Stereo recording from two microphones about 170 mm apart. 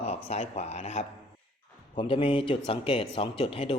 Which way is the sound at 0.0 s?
40° left (ahead or behind).